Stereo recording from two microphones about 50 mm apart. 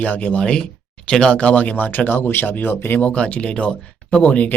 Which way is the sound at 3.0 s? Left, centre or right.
Left.